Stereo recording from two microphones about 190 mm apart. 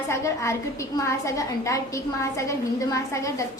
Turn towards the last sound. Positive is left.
turn(degrees=15)  # may be behind; listen again after turning